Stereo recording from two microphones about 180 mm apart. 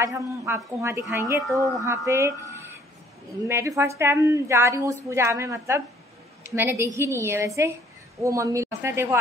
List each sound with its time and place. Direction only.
0.0 s a woman's voice: 15° right (ahead or behind)
3.4 s a woman's voice: 15° right (ahead or behind)